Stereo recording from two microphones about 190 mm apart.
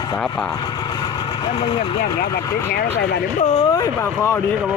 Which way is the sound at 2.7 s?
55° left (ahead or behind).